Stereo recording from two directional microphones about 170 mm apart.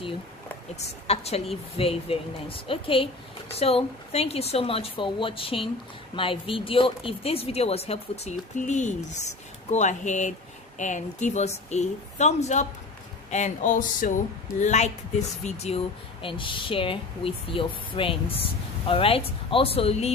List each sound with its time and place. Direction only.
0.7 s a woman's voice: 40° left (ahead or behind)